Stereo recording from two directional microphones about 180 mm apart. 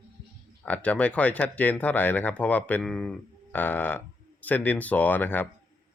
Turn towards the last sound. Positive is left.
turn(degrees=10)  # may be behind; listen again after turning